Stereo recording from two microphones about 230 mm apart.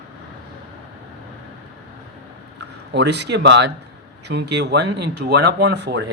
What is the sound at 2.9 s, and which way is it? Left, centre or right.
Speech, right.